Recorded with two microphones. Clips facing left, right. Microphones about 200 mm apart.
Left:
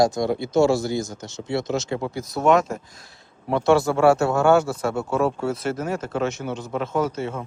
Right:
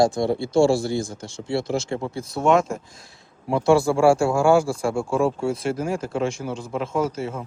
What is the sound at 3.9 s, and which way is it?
Speech, 30° right (ahead or behind).